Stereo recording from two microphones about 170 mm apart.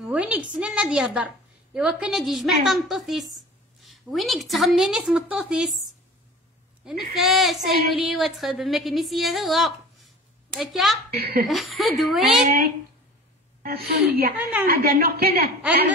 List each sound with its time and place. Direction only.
0.0 s a woman's voice: 5° right (ahead or behind)
6.8 s a woman's voice: centre (ahead or behind)
11.1 s a woman's voice: 65° right (ahead or behind)
11.4 s a woman's voice: centre (ahead or behind)
12.4 s a woman's voice: 60° right (ahead or behind)